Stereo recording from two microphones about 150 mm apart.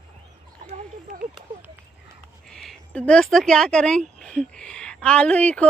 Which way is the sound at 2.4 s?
5° left (ahead or behind).